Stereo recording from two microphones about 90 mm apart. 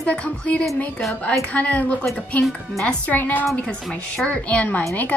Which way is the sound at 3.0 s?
20° left (ahead or behind).